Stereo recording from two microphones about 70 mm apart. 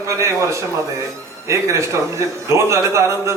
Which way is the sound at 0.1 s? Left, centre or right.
Right.